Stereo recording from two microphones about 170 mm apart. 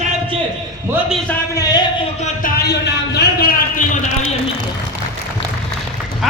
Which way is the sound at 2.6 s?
80° left.